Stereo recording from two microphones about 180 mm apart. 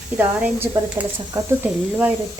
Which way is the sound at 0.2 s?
10° right (ahead or behind).